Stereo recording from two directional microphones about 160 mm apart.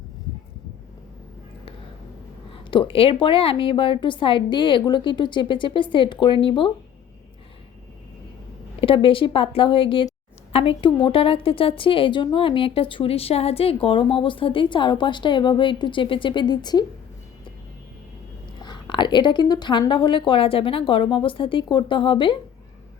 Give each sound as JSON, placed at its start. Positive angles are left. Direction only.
{"t": 2.5, "sound": "a woman's voice", "side_deg": 30}
{"t": 8.8, "sound": "a woman's voice", "side_deg": 35}
{"t": 18.6, "sound": "a woman's voice", "side_deg": 30}